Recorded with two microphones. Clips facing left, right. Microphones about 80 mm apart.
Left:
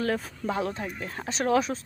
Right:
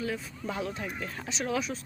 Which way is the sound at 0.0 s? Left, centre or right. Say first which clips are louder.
Left 6 dB; left.